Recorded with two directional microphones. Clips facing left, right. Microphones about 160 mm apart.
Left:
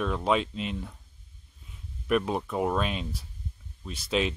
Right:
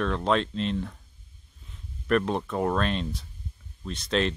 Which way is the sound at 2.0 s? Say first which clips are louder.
Right 2 dB; 5° left (ahead or behind).